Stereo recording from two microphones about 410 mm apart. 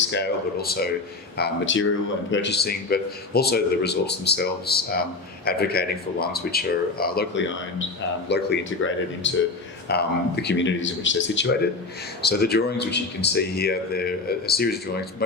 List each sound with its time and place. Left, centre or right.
0.1 s speech: left